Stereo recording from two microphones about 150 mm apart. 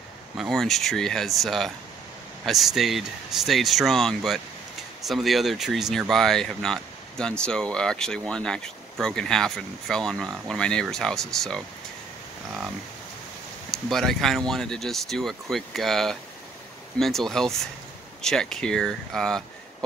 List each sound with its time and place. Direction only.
0.4 s speech: centre (ahead or behind)
13.7 s speech: centre (ahead or behind)